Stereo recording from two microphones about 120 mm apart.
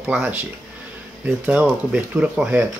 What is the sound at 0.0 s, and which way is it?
Speech, 15° right (ahead or behind).